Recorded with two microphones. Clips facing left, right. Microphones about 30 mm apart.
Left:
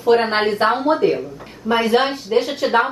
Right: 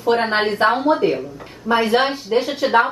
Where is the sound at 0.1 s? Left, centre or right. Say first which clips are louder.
Left 2 dB; centre.